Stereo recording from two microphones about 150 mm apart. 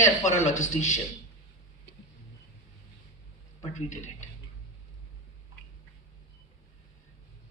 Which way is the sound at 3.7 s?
55° left (ahead or behind).